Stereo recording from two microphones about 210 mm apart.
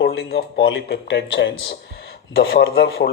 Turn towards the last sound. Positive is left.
turn(degrees=50)  # may be behind; listen again after turning